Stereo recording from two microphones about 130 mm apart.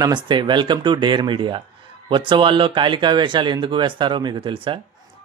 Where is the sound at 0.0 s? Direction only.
35° right (ahead or behind).